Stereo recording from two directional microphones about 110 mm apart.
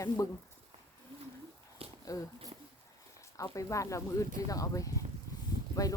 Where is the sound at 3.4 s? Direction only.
30° left (ahead or behind).